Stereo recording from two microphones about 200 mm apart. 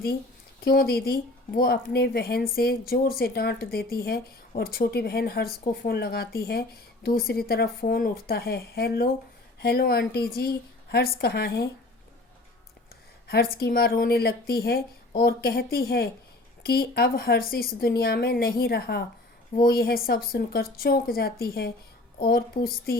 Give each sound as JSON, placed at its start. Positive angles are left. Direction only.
{"t": 0.6, "sound": "a woman's voice", "side_deg": 50}
{"t": 13.2, "sound": "a woman's voice", "side_deg": 50}